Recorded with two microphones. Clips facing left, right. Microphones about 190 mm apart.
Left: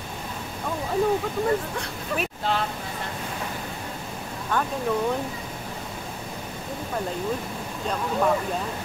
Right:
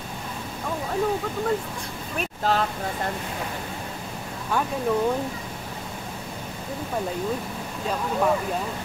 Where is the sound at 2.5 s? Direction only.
40° right (ahead or behind).